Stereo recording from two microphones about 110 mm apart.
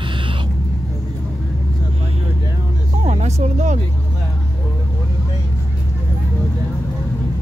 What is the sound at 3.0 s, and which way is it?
Vehicle, 85° right.